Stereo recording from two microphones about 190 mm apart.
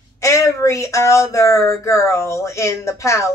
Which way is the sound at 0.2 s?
15° left (ahead or behind).